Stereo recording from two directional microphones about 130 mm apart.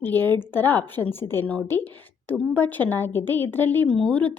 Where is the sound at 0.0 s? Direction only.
15° left (ahead or behind).